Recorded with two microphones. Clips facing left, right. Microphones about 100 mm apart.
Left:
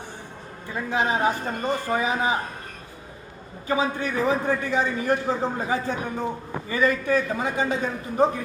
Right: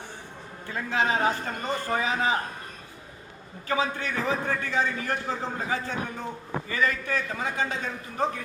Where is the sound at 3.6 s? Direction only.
15° left (ahead or behind).